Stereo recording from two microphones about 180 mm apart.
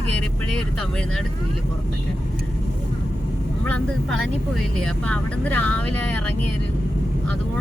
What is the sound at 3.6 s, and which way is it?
Speech, 10° left (ahead or behind).